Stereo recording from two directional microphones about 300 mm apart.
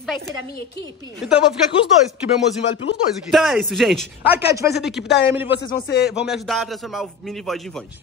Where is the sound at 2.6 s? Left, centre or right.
Left.